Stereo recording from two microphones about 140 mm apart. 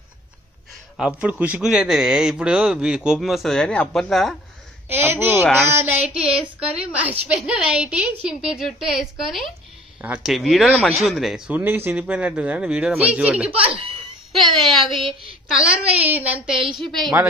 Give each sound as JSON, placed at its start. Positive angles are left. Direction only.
{"t": 0.9, "sound": "a man's voice", "side_deg": -5}
{"t": 4.8, "sound": "a man's voice", "side_deg": -15}
{"t": 14.4, "sound": "a man's voice", "side_deg": 0}
{"t": 16.5, "sound": "a woman's voice", "side_deg": -35}
{"t": 16.8, "sound": "a man's voice", "side_deg": 0}